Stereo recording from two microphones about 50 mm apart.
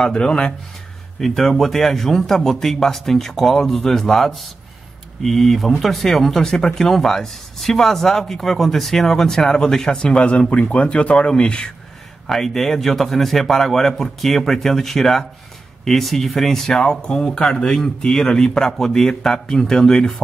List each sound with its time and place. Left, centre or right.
0.0 s speech: centre
1.2 s a man's voice: centre
12.3 s a man's voice: centre